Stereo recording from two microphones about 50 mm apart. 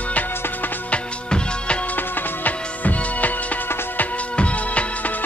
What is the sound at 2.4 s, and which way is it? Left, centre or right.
Music, left.